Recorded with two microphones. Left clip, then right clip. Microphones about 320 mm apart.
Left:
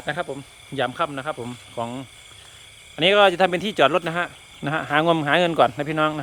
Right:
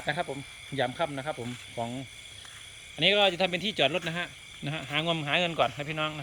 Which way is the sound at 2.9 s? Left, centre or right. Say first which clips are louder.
Left 8 dB; centre.